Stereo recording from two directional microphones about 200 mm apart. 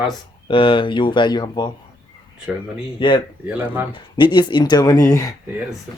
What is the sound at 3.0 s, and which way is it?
Speech, 25° left (ahead or behind).